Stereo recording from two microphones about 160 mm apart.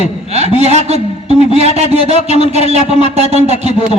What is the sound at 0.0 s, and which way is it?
A man's voice, 40° right (ahead or behind).